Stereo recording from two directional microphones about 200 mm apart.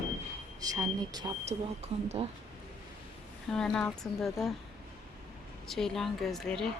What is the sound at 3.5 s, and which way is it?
Speech, 5° left (ahead or behind).